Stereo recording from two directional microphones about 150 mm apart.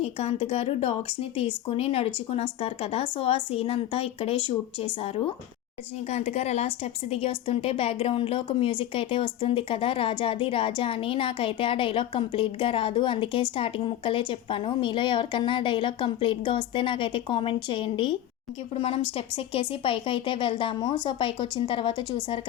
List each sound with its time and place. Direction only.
0.0 s a woman's voice: 45° left (ahead or behind)